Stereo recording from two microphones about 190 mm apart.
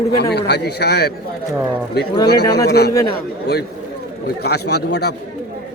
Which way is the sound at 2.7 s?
60° left (ahead or behind).